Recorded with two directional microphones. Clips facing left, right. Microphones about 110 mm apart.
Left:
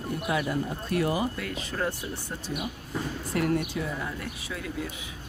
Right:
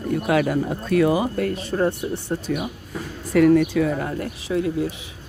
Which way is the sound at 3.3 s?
90° right.